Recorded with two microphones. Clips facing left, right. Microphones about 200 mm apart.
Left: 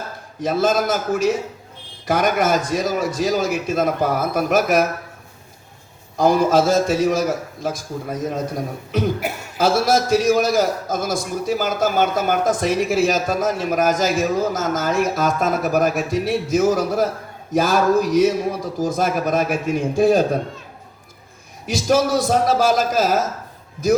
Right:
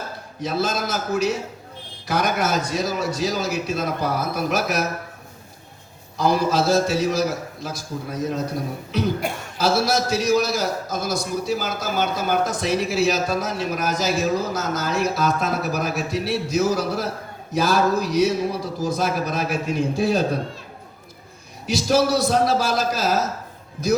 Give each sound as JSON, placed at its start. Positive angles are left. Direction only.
{"t": 0.4, "sound": "a man's voice", "side_deg": 50}
{"t": 6.1, "sound": "a man's voice", "side_deg": 50}
{"t": 9.2, "sound": "a sound", "side_deg": 5}
{"t": 9.6, "sound": "a man's voice", "side_deg": 50}
{"t": 21.7, "sound": "a man's voice", "side_deg": 50}